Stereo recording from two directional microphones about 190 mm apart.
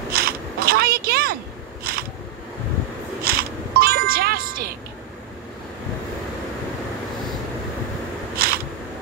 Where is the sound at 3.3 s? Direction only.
50° right (ahead or behind).